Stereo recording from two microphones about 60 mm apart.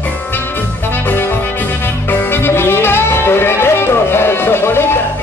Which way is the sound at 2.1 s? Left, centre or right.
Left.